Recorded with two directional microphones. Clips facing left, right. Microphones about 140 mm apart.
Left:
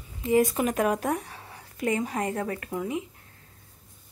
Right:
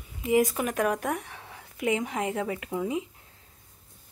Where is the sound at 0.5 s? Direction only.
5° left (ahead or behind).